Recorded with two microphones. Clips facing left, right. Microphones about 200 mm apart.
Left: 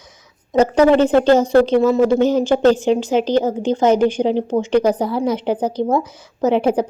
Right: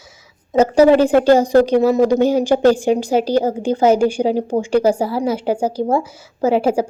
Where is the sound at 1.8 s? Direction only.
35° right (ahead or behind).